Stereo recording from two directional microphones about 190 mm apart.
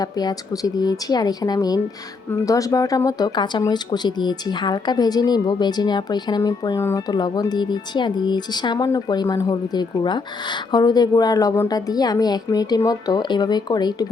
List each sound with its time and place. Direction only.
0.0 s speech: 20° left (ahead or behind)